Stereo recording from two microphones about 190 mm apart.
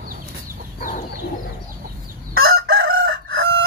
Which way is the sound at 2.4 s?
90° right.